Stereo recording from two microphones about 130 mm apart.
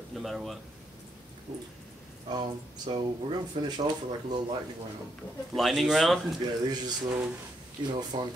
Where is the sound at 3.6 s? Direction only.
35° right (ahead or behind).